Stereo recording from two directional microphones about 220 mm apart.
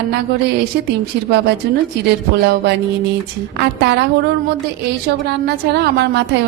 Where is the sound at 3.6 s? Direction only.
50° right (ahead or behind).